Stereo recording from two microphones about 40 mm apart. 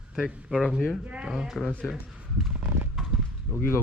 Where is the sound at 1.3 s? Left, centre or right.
Centre.